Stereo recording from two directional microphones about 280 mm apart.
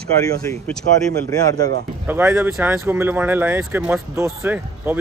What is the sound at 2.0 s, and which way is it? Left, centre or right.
Speech, centre.